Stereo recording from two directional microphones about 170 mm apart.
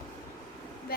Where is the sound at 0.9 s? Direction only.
65° left (ahead or behind).